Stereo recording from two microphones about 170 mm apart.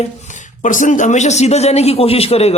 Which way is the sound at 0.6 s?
50° left (ahead or behind).